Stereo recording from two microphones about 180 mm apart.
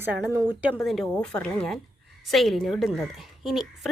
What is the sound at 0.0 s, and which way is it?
Speech, 10° right (ahead or behind).